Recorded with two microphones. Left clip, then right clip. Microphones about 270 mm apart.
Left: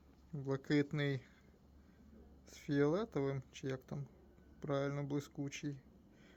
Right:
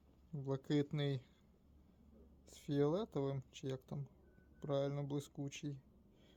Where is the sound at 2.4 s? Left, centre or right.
Centre.